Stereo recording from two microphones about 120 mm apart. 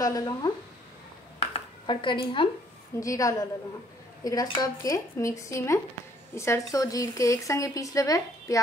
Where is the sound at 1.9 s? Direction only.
45° left (ahead or behind).